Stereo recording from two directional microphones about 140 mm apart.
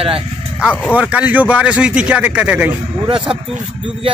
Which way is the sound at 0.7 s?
10° left (ahead or behind).